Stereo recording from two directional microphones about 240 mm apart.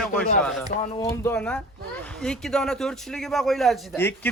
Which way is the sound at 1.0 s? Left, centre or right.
Centre.